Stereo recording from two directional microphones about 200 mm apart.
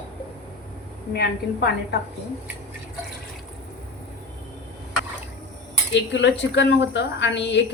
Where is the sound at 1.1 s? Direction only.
55° left (ahead or behind).